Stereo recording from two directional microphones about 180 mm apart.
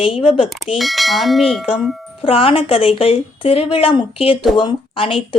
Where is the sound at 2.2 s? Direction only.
30° left (ahead or behind).